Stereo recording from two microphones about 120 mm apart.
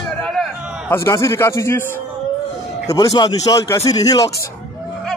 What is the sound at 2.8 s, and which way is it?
Speech, 35° left (ahead or behind).